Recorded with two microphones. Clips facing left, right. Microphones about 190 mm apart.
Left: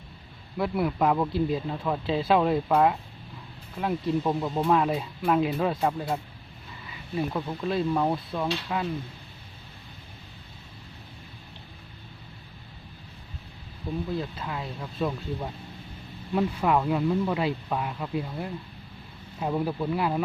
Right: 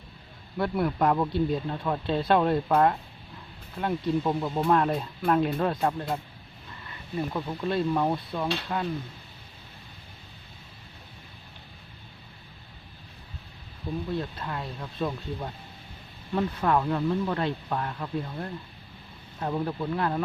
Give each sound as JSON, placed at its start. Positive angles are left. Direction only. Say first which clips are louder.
{"t": 0.5, "sound": "a man's voice", "louder": "even", "side_deg": 5}
{"t": 7.3, "sound": "a man's voice", "louder": "right 2 dB", "side_deg": 0}
{"t": 14.1, "sound": "a man's voice", "louder": "even", "side_deg": 5}